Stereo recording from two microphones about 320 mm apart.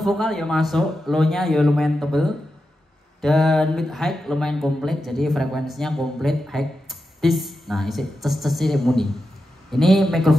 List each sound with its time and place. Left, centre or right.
0.0 s speech: centre